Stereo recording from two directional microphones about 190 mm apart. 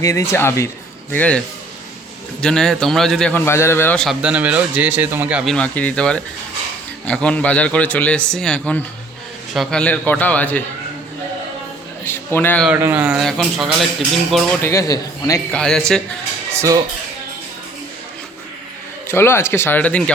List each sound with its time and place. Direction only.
0.0 s a man's voice: 15° left (ahead or behind)
2.4 s a man's voice: 5° left (ahead or behind)
5.5 s a man's voice: 5° left (ahead or behind)
12.0 s a man's voice: 10° left (ahead or behind)
12.6 s a man's voice: 10° right (ahead or behind)
14.6 s a man's voice: 15° left (ahead or behind)
15.5 s a man's voice: 5° left (ahead or behind)
16.6 s speech: 15° right (ahead or behind)
19.0 s a man's voice: 15° left (ahead or behind)